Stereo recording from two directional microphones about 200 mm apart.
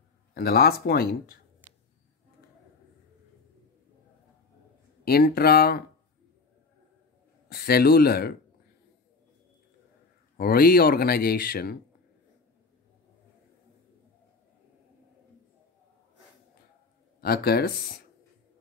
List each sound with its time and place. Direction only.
0.3 s speech: 50° left (ahead or behind)
5.0 s speech: 50° left (ahead or behind)
7.4 s speech: 50° left (ahead or behind)
10.3 s speech: 50° left (ahead or behind)
17.2 s speech: 50° left (ahead or behind)